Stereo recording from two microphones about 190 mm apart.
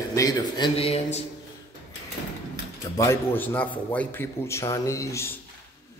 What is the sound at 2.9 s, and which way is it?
A man's voice, 10° left (ahead or behind).